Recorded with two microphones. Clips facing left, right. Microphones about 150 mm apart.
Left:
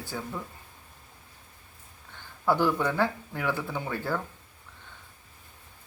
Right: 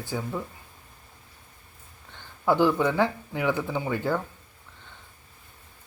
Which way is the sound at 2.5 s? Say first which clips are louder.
Right 3 dB; 15° right (ahead or behind).